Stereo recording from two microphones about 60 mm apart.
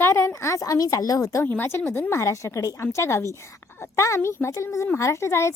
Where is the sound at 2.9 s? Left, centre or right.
Left.